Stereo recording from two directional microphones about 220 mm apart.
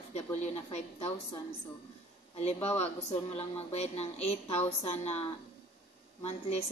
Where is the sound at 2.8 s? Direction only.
30° left (ahead or behind).